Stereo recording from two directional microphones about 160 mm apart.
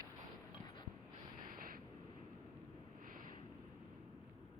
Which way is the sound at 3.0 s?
60° right (ahead or behind).